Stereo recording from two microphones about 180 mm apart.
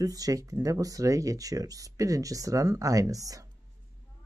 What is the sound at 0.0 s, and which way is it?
Speech, 20° right (ahead or behind).